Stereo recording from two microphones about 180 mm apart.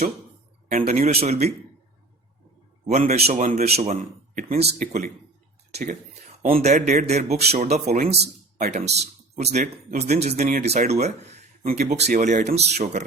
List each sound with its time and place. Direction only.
0.7 s speech: 50° right (ahead or behind)
2.8 s speech: 35° right (ahead or behind)
6.5 s speech: 40° right (ahead or behind)